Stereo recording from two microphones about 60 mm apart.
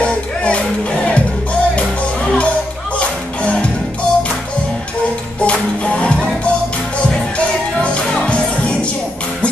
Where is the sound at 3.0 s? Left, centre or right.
Centre.